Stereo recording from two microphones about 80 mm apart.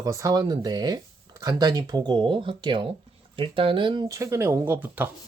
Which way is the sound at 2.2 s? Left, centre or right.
Right.